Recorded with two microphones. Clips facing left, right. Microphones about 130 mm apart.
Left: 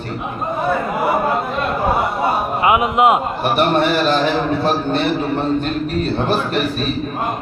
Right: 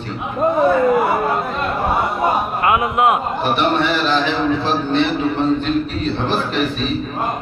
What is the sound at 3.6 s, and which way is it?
A man's voice, 45° left (ahead or behind).